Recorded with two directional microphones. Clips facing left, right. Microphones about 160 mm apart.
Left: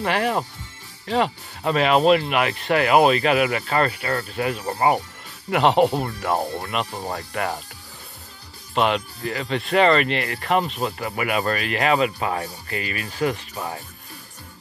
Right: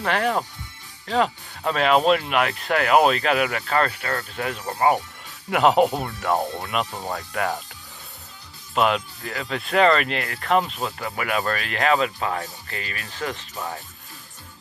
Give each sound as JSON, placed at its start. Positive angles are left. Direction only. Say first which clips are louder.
{"t": 0.0, "sound": "speech", "louder": "left 1 dB", "side_deg": 5}
{"t": 8.7, "sound": "speech", "louder": "even", "side_deg": 0}